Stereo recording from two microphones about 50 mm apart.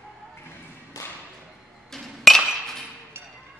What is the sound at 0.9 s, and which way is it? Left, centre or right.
Thump, left.